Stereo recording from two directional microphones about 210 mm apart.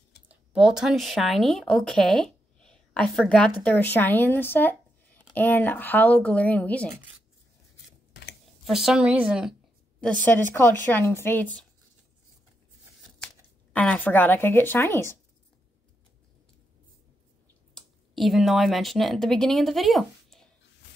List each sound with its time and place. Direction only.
0.3 s speech: 5° right (ahead or behind)
8.1 s a sound: 50° left (ahead or behind)
8.6 s a woman's voice: centre (ahead or behind)
9.2 s a sound: 5° right (ahead or behind)
10.2 s speech: 10° left (ahead or behind)
13.7 s speech: 5° left (ahead or behind)
17.7 s speech: centre (ahead or behind)